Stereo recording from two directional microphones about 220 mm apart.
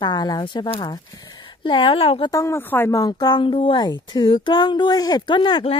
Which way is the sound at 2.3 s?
15° left (ahead or behind).